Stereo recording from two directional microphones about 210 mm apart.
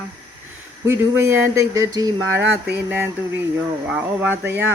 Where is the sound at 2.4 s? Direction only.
55° right (ahead or behind).